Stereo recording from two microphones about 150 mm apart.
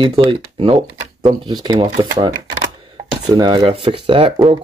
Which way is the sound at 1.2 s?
30° right (ahead or behind).